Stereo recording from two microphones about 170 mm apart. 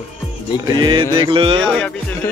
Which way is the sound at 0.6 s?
25° right (ahead or behind).